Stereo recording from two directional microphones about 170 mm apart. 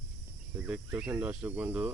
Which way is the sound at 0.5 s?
10° right (ahead or behind).